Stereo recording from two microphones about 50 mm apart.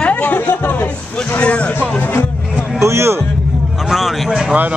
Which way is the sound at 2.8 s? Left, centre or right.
Right.